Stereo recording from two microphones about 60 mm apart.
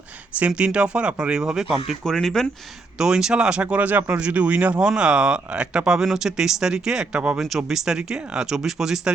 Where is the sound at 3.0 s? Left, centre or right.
Centre.